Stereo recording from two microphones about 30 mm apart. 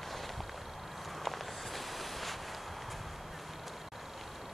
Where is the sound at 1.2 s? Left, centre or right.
Centre.